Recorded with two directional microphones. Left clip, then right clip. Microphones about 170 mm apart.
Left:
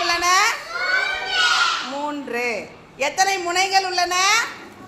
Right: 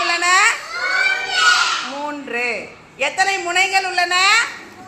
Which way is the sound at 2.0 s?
10° left (ahead or behind).